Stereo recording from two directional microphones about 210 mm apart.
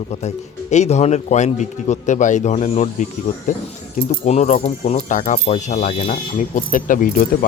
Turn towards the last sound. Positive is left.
turn(degrees=40)  # may be behind; listen again after turning